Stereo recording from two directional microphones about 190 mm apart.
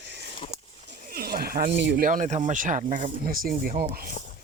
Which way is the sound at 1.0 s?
50° right (ahead or behind).